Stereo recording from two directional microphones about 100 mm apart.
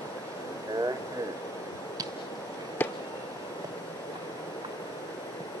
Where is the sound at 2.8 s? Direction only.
20° left (ahead or behind).